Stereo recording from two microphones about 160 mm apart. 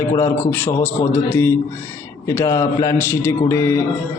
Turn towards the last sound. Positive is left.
turn(degrees=15)  # may be behind; listen again after turning